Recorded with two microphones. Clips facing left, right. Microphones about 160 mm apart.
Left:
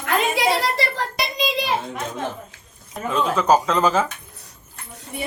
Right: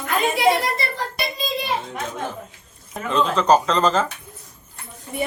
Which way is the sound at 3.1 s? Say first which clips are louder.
Right 1 dB; 5° left (ahead or behind).